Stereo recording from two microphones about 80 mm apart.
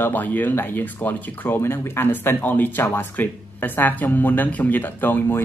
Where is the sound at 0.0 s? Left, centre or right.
Left.